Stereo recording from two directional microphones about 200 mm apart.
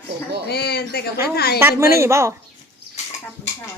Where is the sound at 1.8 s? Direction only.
15° right (ahead or behind).